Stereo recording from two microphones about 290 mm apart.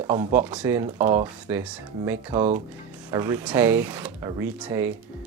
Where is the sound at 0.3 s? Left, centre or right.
Centre.